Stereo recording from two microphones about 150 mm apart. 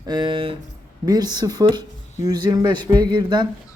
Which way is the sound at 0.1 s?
30° right (ahead or behind).